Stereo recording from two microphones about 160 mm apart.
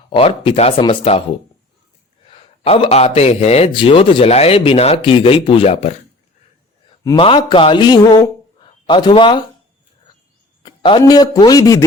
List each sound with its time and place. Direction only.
0.2 s speech: 35° left (ahead or behind)
2.3 s speech: 35° left (ahead or behind)
7.2 s speech: 30° left (ahead or behind)
10.6 s a sound: 30° left (ahead or behind)
11.0 s speech: 25° left (ahead or behind)